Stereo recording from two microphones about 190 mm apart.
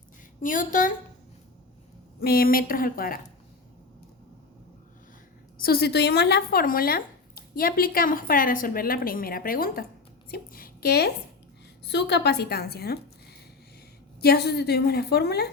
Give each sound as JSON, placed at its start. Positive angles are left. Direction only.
{"t": 0.4, "sound": "speech", "side_deg": 45}
{"t": 2.2, "sound": "speech", "side_deg": 50}
{"t": 5.6, "sound": "a woman's voice", "side_deg": 55}
{"t": 14.2, "sound": "a woman's voice", "side_deg": 55}